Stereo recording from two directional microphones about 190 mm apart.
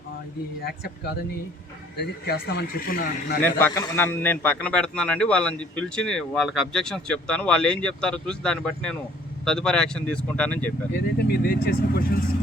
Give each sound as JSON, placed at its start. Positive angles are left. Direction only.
{"t": 0.6, "sound": "speech", "side_deg": 55}
{"t": 2.2, "sound": "a man's voice", "side_deg": 60}
{"t": 3.4, "sound": "a man's voice", "side_deg": 10}
{"t": 11.2, "sound": "a man's voice", "side_deg": 55}